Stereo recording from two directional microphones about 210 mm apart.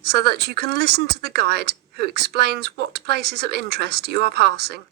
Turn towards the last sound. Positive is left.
turn(degrees=-50)  # may be behind; listen again after turning